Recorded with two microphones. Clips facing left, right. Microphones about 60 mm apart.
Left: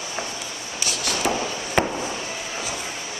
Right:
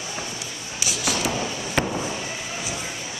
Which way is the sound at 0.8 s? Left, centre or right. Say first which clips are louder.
Even; centre.